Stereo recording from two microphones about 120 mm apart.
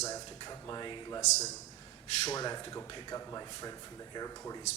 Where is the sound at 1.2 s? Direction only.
70° left (ahead or behind).